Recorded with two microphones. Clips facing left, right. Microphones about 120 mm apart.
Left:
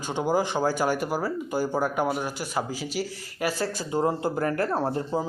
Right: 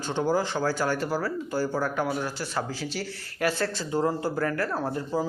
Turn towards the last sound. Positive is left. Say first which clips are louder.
# left 2 dB
turn(degrees=25)  # may be behind; listen again after turning